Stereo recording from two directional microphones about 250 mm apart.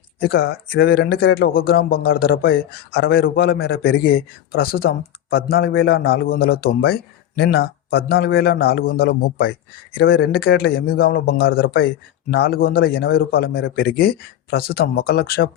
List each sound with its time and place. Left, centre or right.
0.2 s a man's voice: left